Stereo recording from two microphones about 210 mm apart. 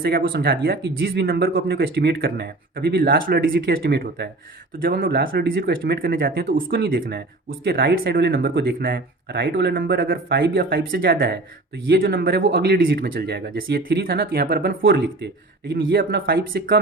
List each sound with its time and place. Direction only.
0.0 s speech: 45° right (ahead or behind)